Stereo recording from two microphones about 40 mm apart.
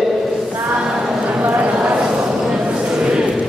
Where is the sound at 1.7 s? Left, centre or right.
Centre.